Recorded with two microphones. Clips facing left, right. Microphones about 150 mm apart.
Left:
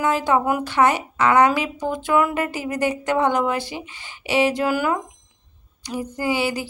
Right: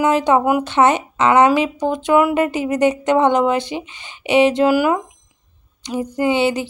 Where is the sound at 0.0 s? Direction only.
20° right (ahead or behind).